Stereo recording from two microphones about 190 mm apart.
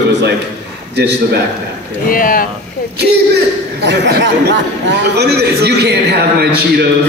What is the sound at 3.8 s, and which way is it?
A man's voice, 65° right (ahead or behind).